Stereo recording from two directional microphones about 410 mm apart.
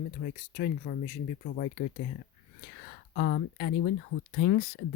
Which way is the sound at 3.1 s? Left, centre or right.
Left.